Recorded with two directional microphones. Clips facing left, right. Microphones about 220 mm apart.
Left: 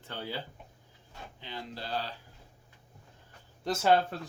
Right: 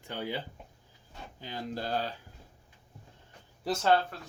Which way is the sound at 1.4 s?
45° right (ahead or behind).